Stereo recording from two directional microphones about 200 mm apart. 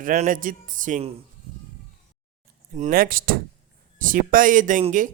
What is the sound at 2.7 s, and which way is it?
A man's voice, 40° right (ahead or behind).